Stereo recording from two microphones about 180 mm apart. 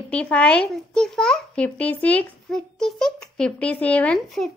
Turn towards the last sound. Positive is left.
turn(degrees=5)  # may be behind; listen again after turning